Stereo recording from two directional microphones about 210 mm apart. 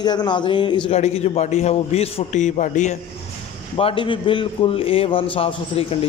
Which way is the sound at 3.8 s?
25° left (ahead or behind).